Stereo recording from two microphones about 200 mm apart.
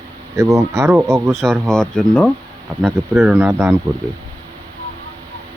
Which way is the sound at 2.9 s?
15° right (ahead or behind).